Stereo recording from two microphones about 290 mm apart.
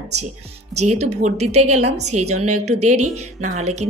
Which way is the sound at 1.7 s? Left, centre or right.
Right.